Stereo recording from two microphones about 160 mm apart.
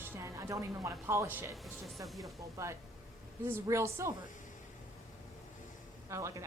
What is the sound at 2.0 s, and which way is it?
Speech, centre (ahead or behind).